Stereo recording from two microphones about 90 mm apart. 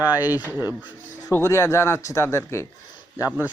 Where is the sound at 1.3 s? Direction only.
30° left (ahead or behind).